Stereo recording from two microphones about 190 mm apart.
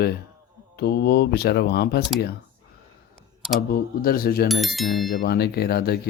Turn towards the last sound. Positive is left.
turn(degrees=55)  # may be behind; listen again after turning